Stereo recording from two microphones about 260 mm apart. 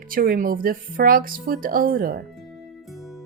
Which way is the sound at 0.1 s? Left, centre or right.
Right.